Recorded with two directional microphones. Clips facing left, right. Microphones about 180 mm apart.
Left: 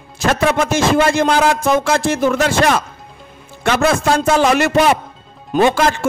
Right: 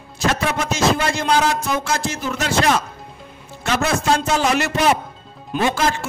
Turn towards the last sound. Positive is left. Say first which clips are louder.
# left 7 dB
turn(degrees=60)  # may be behind; listen again after turning